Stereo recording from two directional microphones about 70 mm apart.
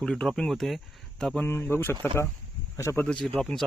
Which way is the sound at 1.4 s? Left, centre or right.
Left.